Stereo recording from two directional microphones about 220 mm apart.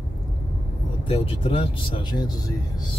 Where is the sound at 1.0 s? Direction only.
25° left (ahead or behind).